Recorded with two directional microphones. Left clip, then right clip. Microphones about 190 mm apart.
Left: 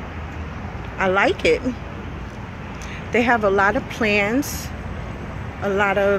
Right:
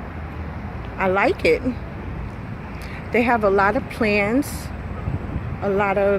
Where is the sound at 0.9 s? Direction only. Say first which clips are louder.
Left 1 dB; 5° right (ahead or behind).